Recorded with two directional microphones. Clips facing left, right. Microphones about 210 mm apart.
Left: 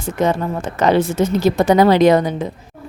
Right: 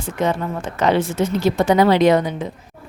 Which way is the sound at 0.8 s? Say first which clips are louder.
Left 3 dB; 40° left (ahead or behind).